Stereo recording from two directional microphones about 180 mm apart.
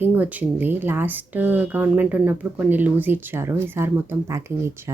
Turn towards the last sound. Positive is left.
turn(degrees=-15)  # may be behind; listen again after turning